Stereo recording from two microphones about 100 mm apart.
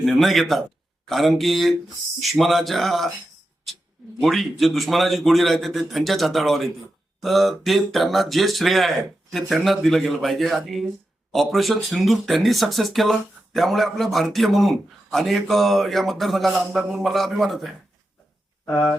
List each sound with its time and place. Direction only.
0.0 s speech: centre (ahead or behind)
4.2 s speech: centre (ahead or behind)
18.6 s speech: 20° left (ahead or behind)